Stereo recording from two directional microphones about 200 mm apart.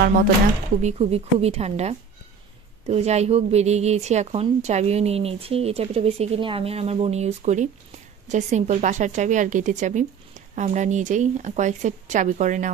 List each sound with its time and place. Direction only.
0.7 s a woman's voice: 35° right (ahead or behind)